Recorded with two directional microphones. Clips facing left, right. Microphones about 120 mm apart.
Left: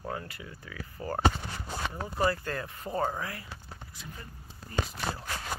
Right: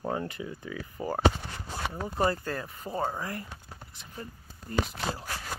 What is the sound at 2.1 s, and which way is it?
Speech, 30° right (ahead or behind).